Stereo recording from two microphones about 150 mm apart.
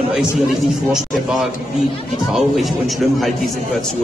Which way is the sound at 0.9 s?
Centre (ahead or behind).